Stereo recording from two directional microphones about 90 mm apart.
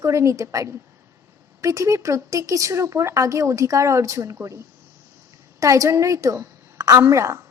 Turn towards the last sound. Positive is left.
turn(degrees=-35)  # may be behind; listen again after turning